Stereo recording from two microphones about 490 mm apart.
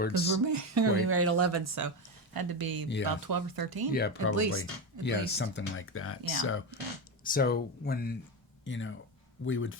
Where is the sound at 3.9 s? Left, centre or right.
Centre.